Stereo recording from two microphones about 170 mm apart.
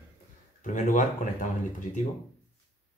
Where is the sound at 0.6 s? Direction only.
50° left (ahead or behind).